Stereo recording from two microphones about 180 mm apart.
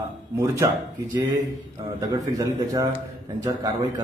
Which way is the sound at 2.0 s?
20° right (ahead or behind).